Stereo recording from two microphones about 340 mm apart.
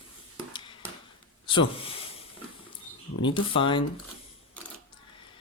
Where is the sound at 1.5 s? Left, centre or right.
Centre.